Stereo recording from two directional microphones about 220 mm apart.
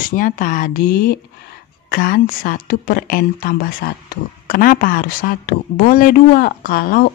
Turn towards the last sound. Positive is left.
turn(degrees=40)  # may be behind; listen again after turning